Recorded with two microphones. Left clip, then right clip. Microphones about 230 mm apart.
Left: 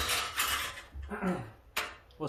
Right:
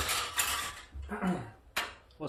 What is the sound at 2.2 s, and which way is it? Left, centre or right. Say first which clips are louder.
Speech: left 2 dB; left.